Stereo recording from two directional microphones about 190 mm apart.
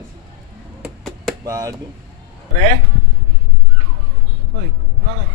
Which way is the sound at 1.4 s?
20° right (ahead or behind).